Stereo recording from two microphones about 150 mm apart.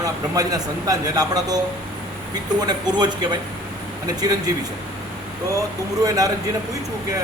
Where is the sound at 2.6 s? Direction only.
30° right (ahead or behind).